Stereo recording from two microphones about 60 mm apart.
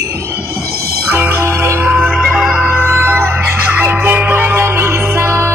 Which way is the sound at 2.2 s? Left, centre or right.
Centre.